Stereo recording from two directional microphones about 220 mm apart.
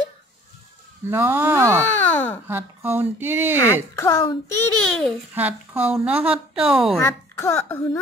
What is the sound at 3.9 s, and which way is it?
Speech, 15° left (ahead or behind).